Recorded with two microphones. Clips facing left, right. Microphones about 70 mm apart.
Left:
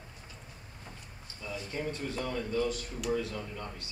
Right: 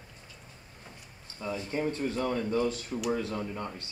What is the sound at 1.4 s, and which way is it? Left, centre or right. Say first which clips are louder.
Speech: right 5 dB; right.